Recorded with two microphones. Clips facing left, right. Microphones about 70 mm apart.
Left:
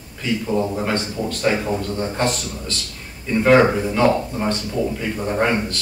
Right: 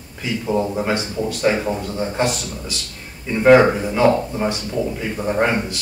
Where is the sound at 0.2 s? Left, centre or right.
Centre.